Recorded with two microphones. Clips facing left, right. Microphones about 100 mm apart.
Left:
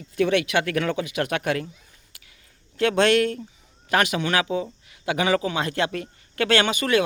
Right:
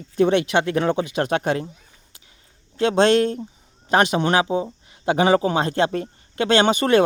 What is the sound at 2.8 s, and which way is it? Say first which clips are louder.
Speech: right 3 dB; 30° right (ahead or behind).